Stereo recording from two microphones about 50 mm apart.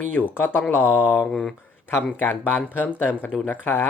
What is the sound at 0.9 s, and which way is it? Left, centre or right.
Mantra, right.